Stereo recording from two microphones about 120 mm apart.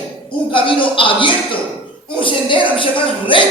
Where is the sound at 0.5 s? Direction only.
45° left (ahead or behind).